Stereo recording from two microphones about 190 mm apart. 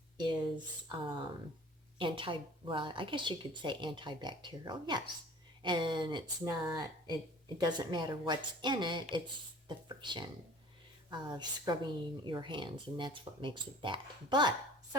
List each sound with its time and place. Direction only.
0.2 s a woman's voice: 25° right (ahead or behind)
2.0 s a woman's voice: 25° right (ahead or behind)
7.6 s a woman's voice: 20° right (ahead or behind)